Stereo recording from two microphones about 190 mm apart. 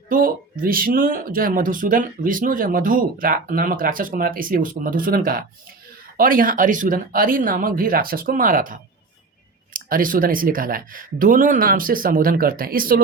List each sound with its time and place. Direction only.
0.1 s speech: 50° right (ahead or behind)